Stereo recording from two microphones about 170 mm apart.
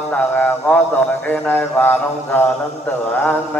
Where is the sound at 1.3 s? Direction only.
10° left (ahead or behind).